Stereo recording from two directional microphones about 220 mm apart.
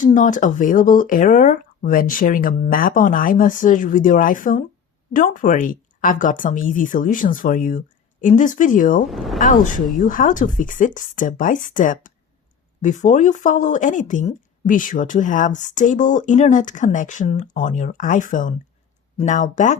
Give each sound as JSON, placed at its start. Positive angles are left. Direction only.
{"t": 0.0, "sound": "speech", "side_deg": 35}
{"t": 9.0, "sound": "speech", "side_deg": 0}
{"t": 9.4, "sound": "speech", "side_deg": 35}